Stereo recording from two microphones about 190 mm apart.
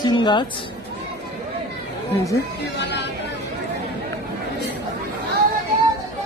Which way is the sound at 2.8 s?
65° left (ahead or behind).